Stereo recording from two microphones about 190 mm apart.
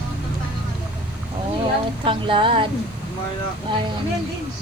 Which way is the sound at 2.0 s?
25° right (ahead or behind).